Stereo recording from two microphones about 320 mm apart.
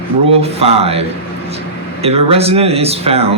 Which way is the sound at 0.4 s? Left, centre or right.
Centre.